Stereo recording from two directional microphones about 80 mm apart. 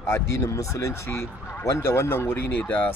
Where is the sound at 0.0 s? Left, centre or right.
Left.